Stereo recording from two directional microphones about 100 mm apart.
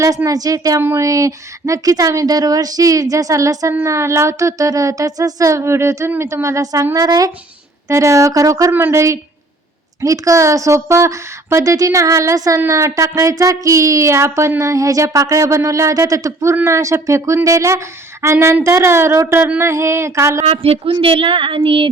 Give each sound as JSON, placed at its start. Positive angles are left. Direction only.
{"t": 0.3, "sound": "a woman's voice", "side_deg": -35}
{"t": 0.8, "sound": "speech", "side_deg": -25}
{"t": 1.0, "sound": "a woman's voice", "side_deg": -35}
{"t": 20.4, "sound": "a woman's voice", "side_deg": -85}
{"t": 20.9, "sound": "speech", "side_deg": -60}